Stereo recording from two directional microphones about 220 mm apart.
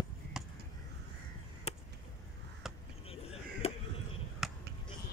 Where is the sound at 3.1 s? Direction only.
25° left (ahead or behind).